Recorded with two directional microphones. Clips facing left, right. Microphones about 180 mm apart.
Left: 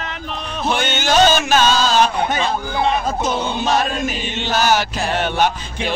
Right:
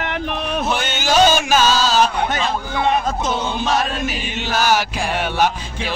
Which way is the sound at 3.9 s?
5° right (ahead or behind).